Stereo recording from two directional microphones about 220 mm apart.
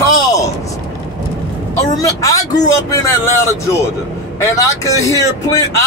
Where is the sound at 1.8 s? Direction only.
15° left (ahead or behind).